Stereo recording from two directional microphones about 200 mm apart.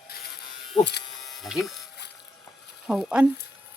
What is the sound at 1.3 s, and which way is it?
Speech, centre (ahead or behind).